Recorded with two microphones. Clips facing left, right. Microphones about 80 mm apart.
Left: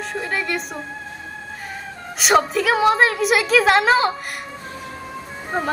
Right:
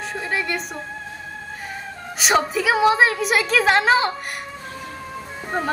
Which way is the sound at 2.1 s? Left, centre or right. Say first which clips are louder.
Left 3 dB; centre.